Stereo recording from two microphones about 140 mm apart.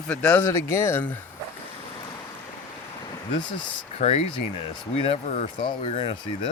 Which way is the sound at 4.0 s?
50° left (ahead or behind).